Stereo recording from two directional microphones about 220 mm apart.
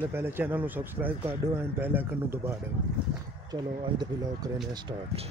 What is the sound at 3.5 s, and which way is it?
Speech, 20° right (ahead or behind).